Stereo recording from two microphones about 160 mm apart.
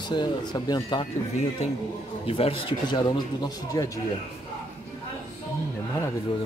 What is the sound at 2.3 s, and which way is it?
Speech, 35° left (ahead or behind).